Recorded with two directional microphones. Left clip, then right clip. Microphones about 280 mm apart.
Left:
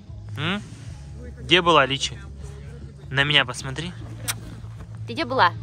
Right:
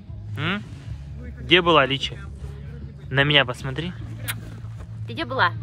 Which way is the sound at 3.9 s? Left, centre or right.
Left.